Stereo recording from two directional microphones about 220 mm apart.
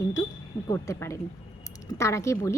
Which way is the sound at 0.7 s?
15° left (ahead or behind).